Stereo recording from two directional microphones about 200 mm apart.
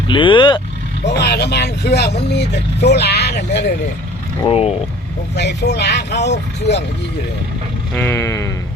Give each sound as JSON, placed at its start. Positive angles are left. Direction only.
{"t": 0.1, "sound": "speech", "side_deg": 25}
{"t": 1.0, "sound": "speech", "side_deg": 55}
{"t": 4.4, "sound": "speech", "side_deg": 30}
{"t": 5.3, "sound": "speech", "side_deg": 60}
{"t": 7.9, "sound": "a sound", "side_deg": 10}